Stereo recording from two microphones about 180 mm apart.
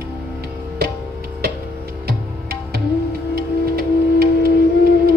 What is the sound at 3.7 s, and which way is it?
Music, 60° right (ahead or behind).